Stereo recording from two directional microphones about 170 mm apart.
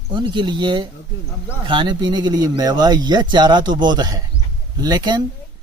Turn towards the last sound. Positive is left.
turn(degrees=-25)  # may be behind; listen again after turning